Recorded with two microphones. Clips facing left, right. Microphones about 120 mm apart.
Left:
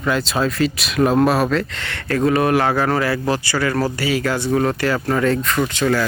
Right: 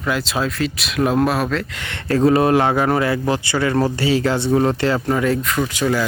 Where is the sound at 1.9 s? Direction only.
30° right (ahead or behind).